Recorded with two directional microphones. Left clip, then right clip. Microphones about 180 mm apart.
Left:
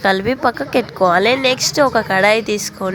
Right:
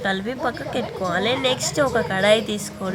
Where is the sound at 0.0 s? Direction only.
30° left (ahead or behind).